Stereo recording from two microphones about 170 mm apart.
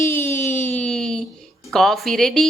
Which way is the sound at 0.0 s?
15° left (ahead or behind).